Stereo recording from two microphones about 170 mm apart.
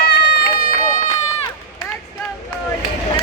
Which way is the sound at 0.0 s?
70° left (ahead or behind).